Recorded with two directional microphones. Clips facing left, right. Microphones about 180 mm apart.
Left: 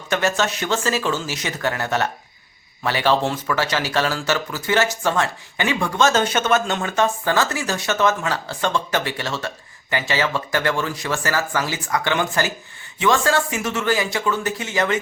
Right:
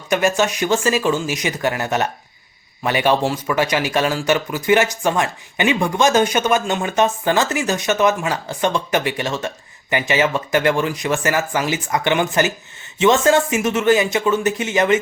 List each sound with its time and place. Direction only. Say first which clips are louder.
0.1 s speech: right 4 dB; 15° right (ahead or behind)